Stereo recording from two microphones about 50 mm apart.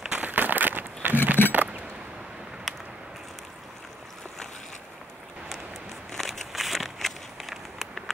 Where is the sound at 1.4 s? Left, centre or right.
Left.